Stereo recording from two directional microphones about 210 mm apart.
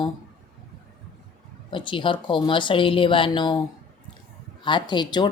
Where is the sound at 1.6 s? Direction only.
25° left (ahead or behind).